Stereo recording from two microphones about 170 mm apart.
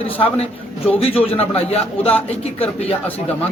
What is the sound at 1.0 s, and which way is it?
A man's voice, 35° left (ahead or behind).